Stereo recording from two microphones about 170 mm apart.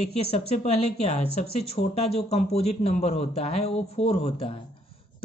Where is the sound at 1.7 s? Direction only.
35° left (ahead or behind).